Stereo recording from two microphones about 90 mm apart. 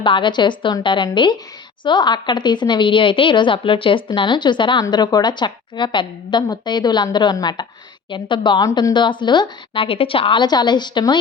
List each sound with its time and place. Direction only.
0.0 s a woman's voice: 65° left (ahead or behind)